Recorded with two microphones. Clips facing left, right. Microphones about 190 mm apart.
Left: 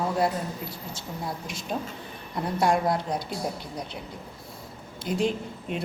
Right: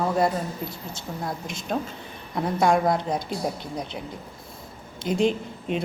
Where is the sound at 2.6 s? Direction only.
50° right (ahead or behind).